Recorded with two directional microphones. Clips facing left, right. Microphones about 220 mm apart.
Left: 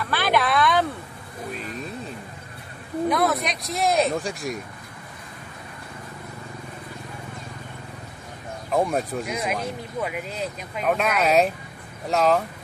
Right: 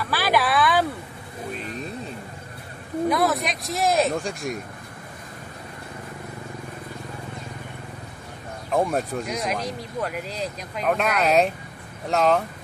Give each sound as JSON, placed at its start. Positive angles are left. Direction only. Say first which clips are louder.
{"t": 0.0, "sound": "a sound", "louder": "even", "side_deg": -5}
{"t": 3.1, "sound": "speech", "louder": "even", "side_deg": 0}
{"t": 8.7, "sound": "speech", "louder": "even", "side_deg": 0}